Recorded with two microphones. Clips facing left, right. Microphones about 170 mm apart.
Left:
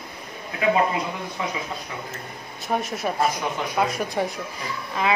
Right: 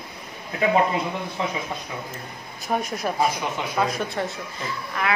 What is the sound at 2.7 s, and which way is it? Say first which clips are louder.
A woman's voice: even; 5° left (ahead or behind).